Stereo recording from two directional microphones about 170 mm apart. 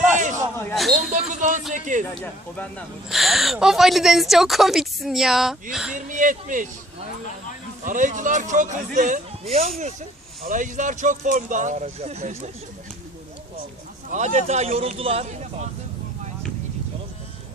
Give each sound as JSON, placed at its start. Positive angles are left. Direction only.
{"t": 0.0, "sound": "a sound", "side_deg": -45}
{"t": 0.6, "sound": "a sound", "side_deg": 5}
{"t": 1.1, "sound": "music", "side_deg": -45}
{"t": 1.7, "sound": "speech", "side_deg": -45}
{"t": 2.1, "sound": "speech", "side_deg": 5}
{"t": 6.0, "sound": "speech", "side_deg": -50}
{"t": 7.9, "sound": "speech", "side_deg": -50}
{"t": 14.1, "sound": "speech", "side_deg": -40}